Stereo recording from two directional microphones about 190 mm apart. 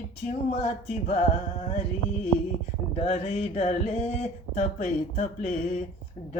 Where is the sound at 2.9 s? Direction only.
35° left (ahead or behind).